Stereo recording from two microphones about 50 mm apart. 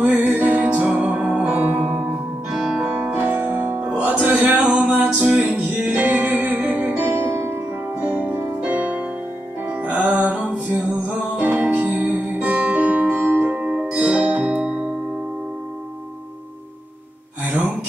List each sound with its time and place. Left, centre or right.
0.2 s music: right
1.5 s music: right
2.5 s music: centre
3.2 s music: right
4.2 s music: right
4.5 s music: centre
4.7 s music: right
7.9 s music: right
13.6 s music: right